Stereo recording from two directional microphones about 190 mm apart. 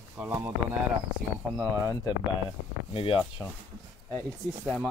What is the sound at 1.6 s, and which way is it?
Speech, 15° left (ahead or behind).